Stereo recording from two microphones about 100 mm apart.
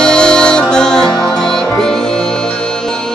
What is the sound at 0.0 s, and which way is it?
Music, 5° left (ahead or behind).